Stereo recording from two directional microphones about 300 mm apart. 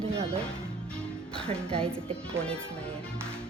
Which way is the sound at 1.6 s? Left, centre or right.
Centre.